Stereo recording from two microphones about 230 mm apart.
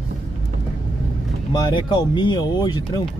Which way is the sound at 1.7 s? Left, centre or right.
Left.